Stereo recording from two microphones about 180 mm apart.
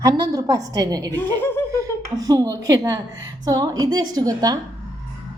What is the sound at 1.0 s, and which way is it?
Speech, 10° left (ahead or behind).